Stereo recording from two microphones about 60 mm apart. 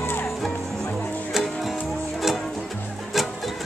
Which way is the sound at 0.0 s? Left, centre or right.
Left.